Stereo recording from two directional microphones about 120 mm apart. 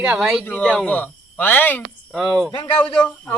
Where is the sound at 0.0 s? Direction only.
5° right (ahead or behind).